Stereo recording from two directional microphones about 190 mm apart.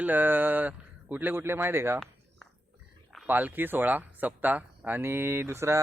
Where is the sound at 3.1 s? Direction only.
10° right (ahead or behind).